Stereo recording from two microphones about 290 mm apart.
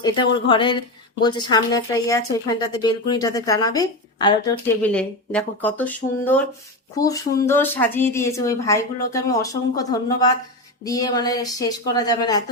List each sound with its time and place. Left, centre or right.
0.0 s speech: centre